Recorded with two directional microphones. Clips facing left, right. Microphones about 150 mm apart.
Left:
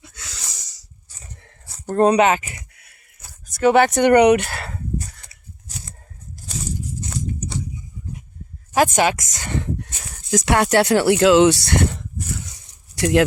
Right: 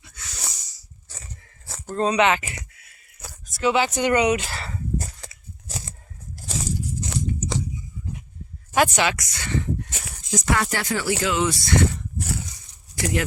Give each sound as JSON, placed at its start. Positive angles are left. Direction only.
{"t": 0.2, "sound": "wheeze", "side_deg": 90}
{"t": 1.9, "sound": "speech", "side_deg": 60}
{"t": 2.1, "sound": "speech", "side_deg": 40}
{"t": 3.6, "sound": "speech", "side_deg": 55}
{"t": 4.9, "sound": "a sound", "side_deg": -90}
{"t": 7.0, "sound": "biting", "side_deg": -90}
{"t": 8.7, "sound": "speech", "side_deg": 45}
{"t": 10.3, "sound": "speech", "side_deg": 75}